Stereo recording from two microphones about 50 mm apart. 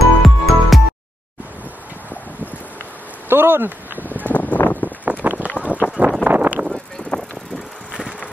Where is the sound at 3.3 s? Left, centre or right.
Right.